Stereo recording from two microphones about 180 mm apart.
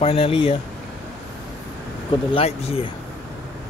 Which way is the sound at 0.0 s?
35° left (ahead or behind).